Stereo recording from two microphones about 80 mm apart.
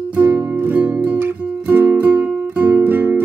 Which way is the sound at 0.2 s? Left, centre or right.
Right.